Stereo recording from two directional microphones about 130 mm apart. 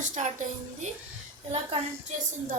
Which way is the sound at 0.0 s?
70° right (ahead or behind).